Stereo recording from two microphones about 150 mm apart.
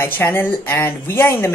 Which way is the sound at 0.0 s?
15° left (ahead or behind).